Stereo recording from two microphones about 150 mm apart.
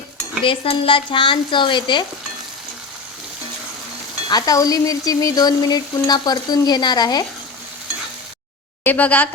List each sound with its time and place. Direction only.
0.4 s speech: 35° left (ahead or behind)
4.3 s frying: 25° left (ahead or behind)
8.8 s speech: 10° left (ahead or behind)